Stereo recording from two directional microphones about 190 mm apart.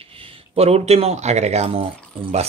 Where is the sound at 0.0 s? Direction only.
30° right (ahead or behind).